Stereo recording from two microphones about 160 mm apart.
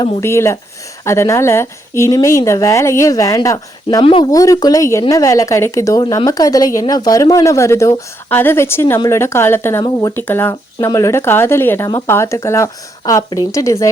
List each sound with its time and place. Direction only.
0.2 s speech: 15° left (ahead or behind)
3.8 s speech: 35° left (ahead or behind)